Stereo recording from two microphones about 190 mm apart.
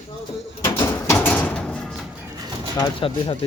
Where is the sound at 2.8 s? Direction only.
25° left (ahead or behind).